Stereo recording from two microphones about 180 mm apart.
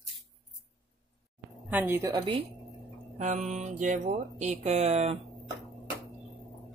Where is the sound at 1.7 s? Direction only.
10° right (ahead or behind).